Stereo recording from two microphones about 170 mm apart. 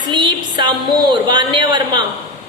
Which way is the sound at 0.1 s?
25° right (ahead or behind).